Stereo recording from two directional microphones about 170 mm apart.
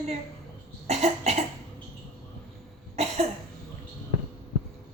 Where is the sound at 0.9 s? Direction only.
40° right (ahead or behind).